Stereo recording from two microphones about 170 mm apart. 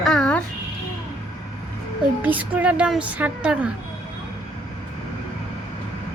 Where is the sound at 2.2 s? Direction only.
10° right (ahead or behind).